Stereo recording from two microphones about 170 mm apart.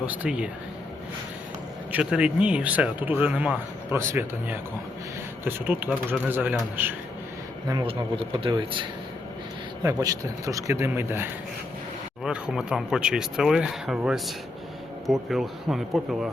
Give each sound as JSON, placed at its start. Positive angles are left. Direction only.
{"t": 0.0, "sound": "speech", "side_deg": -10}
{"t": 1.9, "sound": "speech", "side_deg": -5}
{"t": 7.9, "sound": "a man's voice", "side_deg": -30}
{"t": 12.2, "sound": "speech", "side_deg": -5}